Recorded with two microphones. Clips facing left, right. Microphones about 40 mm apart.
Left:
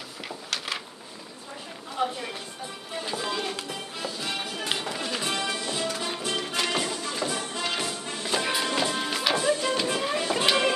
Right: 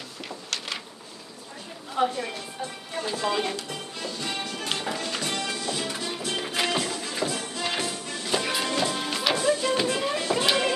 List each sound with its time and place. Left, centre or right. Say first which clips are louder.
2.0 s speech: right 3 dB; centre
2.9 s speech: right 1 dB; centre
3.3 s speech: right 6 dB; centre
3.6 s music: even; centre
6.3 s music: right 2 dB; centre
6.7 s music: right 1 dB; centre
7.0 s music: right 1 dB; centre
7.2 s music: right 1 dB; centre
9.9 s a sound: right 1 dB; centre